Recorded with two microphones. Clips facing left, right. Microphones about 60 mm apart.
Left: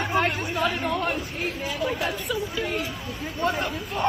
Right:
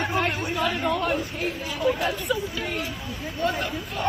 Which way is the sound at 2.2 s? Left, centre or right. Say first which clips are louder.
Right 1 dB; centre.